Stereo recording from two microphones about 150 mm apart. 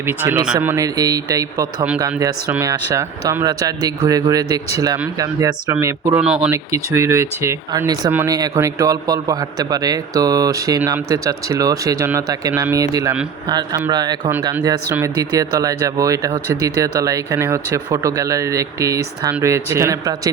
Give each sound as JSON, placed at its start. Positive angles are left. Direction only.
{"t": 0.0, "sound": "a man's voice", "side_deg": -15}
{"t": 6.1, "sound": "speech", "side_deg": -5}
{"t": 6.5, "sound": "a man's voice", "side_deg": -20}